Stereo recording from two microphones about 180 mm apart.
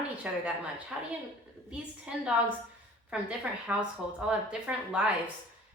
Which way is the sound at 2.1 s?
5° right (ahead or behind).